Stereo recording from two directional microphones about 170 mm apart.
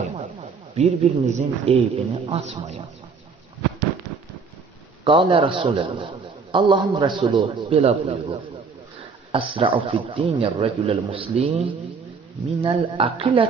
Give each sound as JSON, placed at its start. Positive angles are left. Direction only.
{"t": 0.8, "sound": "a man's voice", "side_deg": -40}
{"t": 5.0, "sound": "a man's voice", "side_deg": -30}
{"t": 12.6, "sound": "a man's voice", "side_deg": -30}